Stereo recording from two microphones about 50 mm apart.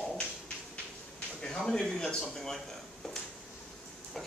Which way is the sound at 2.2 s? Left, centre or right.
Centre.